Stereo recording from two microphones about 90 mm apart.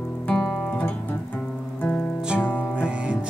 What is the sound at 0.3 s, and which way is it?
Guitar, 15° left (ahead or behind).